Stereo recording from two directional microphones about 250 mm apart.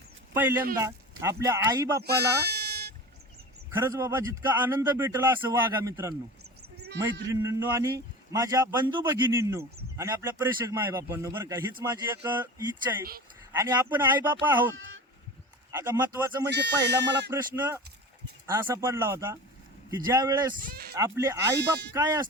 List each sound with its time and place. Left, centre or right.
0.3 s a man's voice: centre
2.0 s sheep: right
3.8 s a man's voice: centre
6.7 s a sound: right
7.3 s a man's voice: centre
15.7 s speech: centre
16.5 s speech: right
17.3 s a man's voice: centre
20.6 s speech: right
20.9 s a man's voice: centre
21.5 s speech: right
21.9 s a man's voice: centre